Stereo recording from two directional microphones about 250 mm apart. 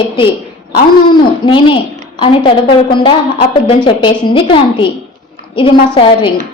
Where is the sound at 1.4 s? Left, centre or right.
Centre.